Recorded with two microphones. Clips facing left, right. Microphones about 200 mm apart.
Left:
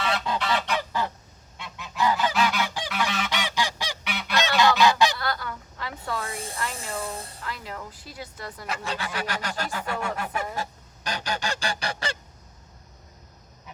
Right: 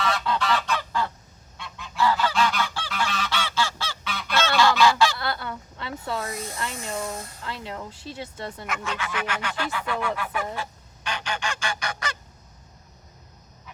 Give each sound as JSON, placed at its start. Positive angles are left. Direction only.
{"t": 0.0, "sound": "goose", "side_deg": 25}
{"t": 5.2, "sound": "a sound", "side_deg": -25}
{"t": 6.2, "sound": "snake", "side_deg": 30}
{"t": 6.7, "sound": "a sound", "side_deg": 30}
{"t": 7.4, "sound": "speech", "side_deg": -25}
{"t": 8.6, "sound": "fowl", "side_deg": 35}
{"t": 10.3, "sound": "goose", "side_deg": 40}